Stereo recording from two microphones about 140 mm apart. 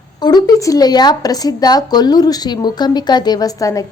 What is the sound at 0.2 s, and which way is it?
Speech, 30° left (ahead or behind).